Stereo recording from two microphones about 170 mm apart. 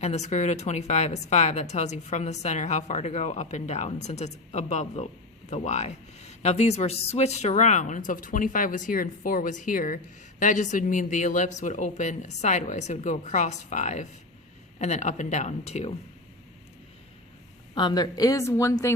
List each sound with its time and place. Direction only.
0.0 s speech: 40° left (ahead or behind)
17.7 s a woman's voice: 25° left (ahead or behind)